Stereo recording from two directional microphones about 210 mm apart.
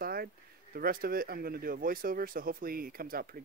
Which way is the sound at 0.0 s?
45° right (ahead or behind).